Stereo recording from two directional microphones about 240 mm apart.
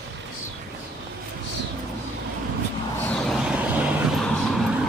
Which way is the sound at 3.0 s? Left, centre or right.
Centre.